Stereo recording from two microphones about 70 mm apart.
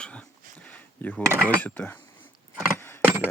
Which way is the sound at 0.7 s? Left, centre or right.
Left.